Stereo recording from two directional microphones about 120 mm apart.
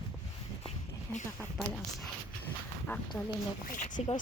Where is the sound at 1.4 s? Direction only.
Centre (ahead or behind).